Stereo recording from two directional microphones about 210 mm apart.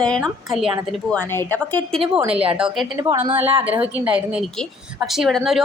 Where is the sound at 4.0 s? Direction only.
5° right (ahead or behind).